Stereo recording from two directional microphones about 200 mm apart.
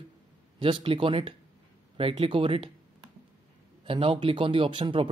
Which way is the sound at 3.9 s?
25° right (ahead or behind).